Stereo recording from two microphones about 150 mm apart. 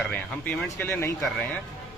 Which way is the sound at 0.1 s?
10° left (ahead or behind).